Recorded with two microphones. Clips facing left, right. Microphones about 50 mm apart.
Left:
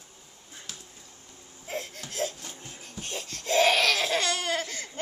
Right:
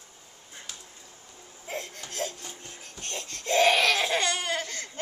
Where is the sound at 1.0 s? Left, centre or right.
Centre.